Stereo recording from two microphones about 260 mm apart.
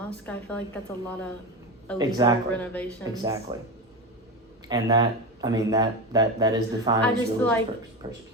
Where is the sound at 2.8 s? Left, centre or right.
Centre.